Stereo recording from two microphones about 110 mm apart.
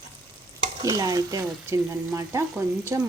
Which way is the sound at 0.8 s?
35° right (ahead or behind).